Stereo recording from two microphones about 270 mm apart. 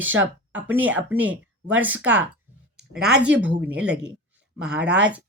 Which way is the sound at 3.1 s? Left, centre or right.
Right.